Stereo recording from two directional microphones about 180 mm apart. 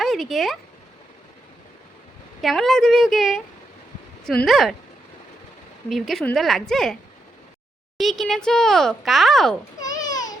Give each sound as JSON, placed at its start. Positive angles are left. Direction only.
{"t": 0.0, "sound": "speech", "side_deg": 0}
{"t": 2.4, "sound": "speech", "side_deg": 0}
{"t": 5.9, "sound": "speech", "side_deg": 0}
{"t": 7.9, "sound": "speech", "side_deg": 0}
{"t": 9.8, "sound": "babbling", "side_deg": 20}